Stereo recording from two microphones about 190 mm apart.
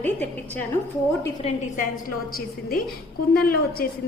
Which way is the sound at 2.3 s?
50° left (ahead or behind).